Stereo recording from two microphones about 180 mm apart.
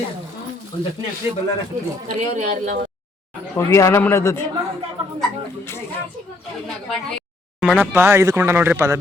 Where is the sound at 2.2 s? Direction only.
40° right (ahead or behind).